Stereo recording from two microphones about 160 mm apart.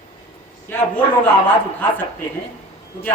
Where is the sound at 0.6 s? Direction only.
10° left (ahead or behind).